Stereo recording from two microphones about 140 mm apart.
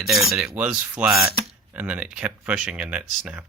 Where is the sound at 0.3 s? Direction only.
10° right (ahead or behind).